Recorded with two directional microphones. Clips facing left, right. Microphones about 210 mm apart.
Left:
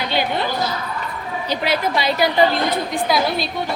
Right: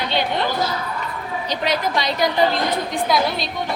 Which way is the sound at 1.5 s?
5° left (ahead or behind).